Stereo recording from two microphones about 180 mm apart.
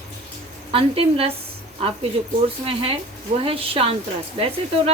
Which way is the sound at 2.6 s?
30° right (ahead or behind).